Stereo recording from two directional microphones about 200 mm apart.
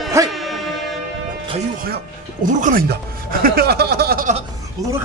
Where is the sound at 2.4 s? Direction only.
45° right (ahead or behind).